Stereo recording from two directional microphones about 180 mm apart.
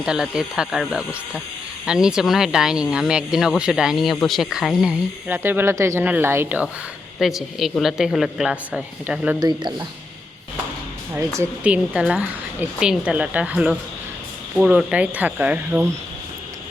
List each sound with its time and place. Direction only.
0.0 s speech: 5° right (ahead or behind)
9.4 s speech: 25° right (ahead or behind)
11.3 s a woman's voice: 10° right (ahead or behind)